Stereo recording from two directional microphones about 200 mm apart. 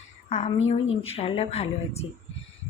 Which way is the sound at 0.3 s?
35° left (ahead or behind).